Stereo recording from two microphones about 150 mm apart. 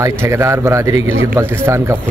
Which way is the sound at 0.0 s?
20° right (ahead or behind).